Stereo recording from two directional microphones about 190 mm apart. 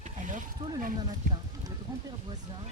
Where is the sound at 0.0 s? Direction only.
45° right (ahead or behind).